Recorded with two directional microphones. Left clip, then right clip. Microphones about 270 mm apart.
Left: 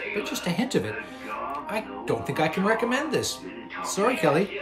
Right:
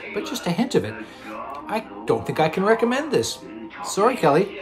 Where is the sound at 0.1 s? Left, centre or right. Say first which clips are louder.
Right 6 dB; centre.